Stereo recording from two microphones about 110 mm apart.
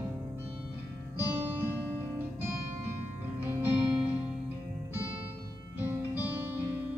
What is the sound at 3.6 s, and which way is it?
Music, 20° right (ahead or behind).